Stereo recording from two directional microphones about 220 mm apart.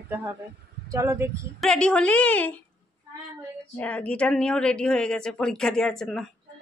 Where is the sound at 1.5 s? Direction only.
5° left (ahead or behind).